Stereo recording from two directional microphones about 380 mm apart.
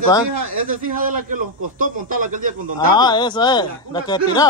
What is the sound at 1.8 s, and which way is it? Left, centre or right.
Speech, right.